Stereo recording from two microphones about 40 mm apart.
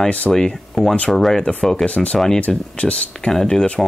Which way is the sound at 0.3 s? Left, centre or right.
Centre.